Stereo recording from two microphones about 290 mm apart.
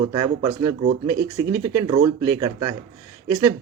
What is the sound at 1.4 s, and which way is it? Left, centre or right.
Speech, centre.